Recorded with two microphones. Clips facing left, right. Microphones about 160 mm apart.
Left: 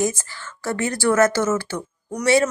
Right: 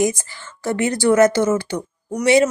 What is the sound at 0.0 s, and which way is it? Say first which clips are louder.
A woman's voice: right 3 dB; 15° right (ahead or behind).